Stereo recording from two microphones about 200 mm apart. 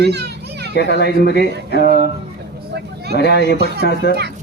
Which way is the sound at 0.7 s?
55° left (ahead or behind).